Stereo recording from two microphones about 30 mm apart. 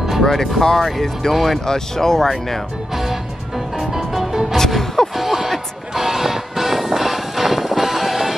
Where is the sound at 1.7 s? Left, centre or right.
Centre.